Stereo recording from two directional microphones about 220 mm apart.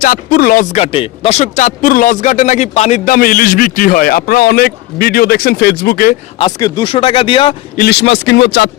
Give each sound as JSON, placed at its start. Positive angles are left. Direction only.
{"t": 0.0, "sound": "speech", "side_deg": 40}
{"t": 6.4, "sound": "speech", "side_deg": 15}
{"t": 7.8, "sound": "speech", "side_deg": 50}